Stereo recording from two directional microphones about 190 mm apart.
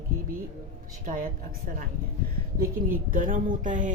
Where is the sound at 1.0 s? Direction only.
45° right (ahead or behind).